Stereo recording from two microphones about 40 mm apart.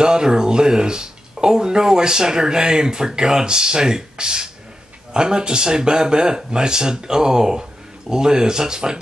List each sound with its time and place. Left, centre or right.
0.0 s speech: centre